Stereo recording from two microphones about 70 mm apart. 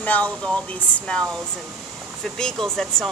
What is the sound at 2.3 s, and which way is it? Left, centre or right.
Speech, centre.